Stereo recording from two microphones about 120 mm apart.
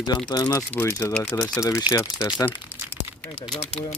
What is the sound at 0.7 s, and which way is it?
Speech, 20° left (ahead or behind).